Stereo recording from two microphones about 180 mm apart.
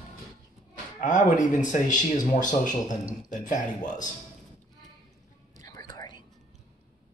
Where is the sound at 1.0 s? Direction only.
45° left (ahead or behind).